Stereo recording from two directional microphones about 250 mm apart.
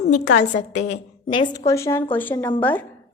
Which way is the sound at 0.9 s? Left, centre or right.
Centre.